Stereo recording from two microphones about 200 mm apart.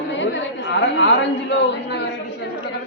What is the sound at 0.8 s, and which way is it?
Speech, 65° left (ahead or behind).